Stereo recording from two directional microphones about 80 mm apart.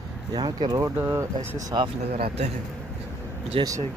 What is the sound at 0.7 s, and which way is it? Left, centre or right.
Speech, right.